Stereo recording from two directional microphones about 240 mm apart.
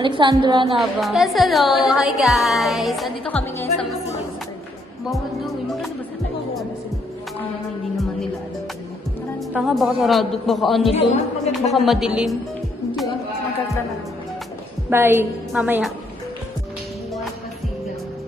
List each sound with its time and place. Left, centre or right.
0.0 s a woman's voice: centre
0.8 s speech: centre
5.1 s speech: centre
9.5 s speech: centre
11.1 s a woman's voice: left
11.7 s speech: centre
14.8 s a woman's voice: centre